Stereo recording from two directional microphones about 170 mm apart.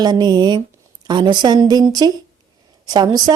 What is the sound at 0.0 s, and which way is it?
A woman's voice, 25° right (ahead or behind).